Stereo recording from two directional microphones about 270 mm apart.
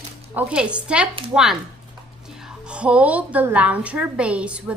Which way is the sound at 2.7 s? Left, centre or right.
Centre.